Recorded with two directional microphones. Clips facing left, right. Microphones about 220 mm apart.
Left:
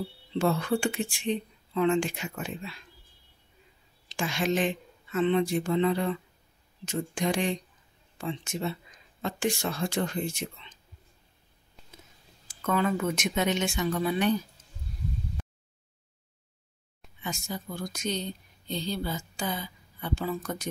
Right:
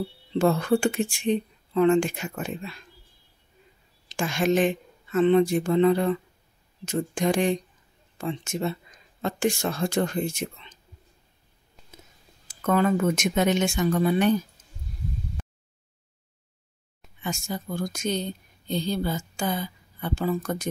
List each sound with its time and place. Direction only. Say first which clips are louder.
0.3 s speech: right 5 dB; 45° right (ahead or behind)
4.1 s speech: right 5 dB; 50° right (ahead or behind)
12.6 s speech: right 5 dB; 45° right (ahead or behind)
17.2 s speech: right 4 dB; 50° right (ahead or behind)